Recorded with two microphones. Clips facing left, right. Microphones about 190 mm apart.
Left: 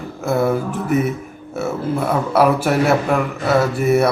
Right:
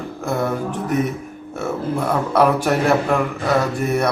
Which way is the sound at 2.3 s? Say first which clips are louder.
Left 1 dB; 5° left (ahead or behind).